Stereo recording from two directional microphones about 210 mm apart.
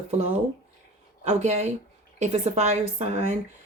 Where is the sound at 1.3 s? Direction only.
35° right (ahead or behind).